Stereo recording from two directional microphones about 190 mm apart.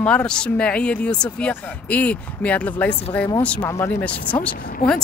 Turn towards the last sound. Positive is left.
turn(degrees=50)  # may be behind; listen again after turning